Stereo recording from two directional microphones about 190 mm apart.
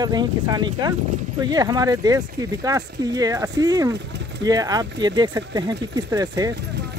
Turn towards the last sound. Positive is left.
turn(degrees=-20)  # may be behind; listen again after turning